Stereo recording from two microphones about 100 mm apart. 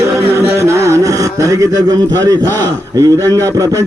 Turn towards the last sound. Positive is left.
turn(degrees=-35)  # may be behind; listen again after turning